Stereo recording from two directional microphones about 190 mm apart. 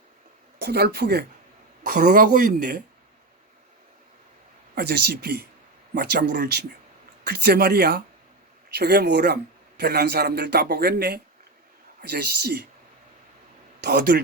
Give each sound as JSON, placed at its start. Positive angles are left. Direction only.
{"t": 0.6, "sound": "speech", "side_deg": -55}
{"t": 4.7, "sound": "speech", "side_deg": -55}
{"t": 13.8, "sound": "speech", "side_deg": -60}